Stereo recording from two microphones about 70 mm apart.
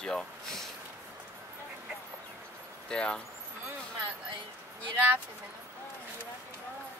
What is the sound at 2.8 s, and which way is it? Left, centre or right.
Speech, centre.